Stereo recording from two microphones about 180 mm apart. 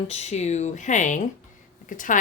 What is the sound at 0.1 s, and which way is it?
Speech, 40° left (ahead or behind).